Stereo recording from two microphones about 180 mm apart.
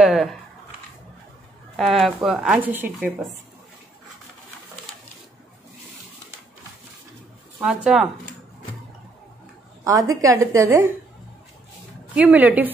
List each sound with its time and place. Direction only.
0.0 s speech: centre (ahead or behind)
1.8 s speech: centre (ahead or behind)
7.6 s speech: centre (ahead or behind)
9.8 s a woman's voice: 20° right (ahead or behind)
12.2 s a woman's voice: 10° right (ahead or behind)